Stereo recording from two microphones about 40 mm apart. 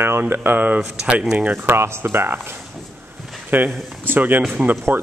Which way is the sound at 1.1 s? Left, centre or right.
Right.